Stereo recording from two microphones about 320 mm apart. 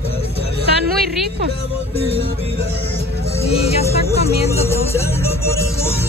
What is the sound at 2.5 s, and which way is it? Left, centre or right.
Music, centre.